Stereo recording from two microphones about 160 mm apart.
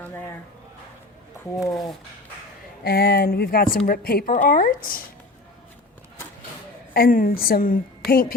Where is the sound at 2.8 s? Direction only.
70° left (ahead or behind).